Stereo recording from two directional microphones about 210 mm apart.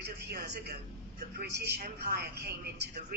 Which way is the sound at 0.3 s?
50° right (ahead or behind).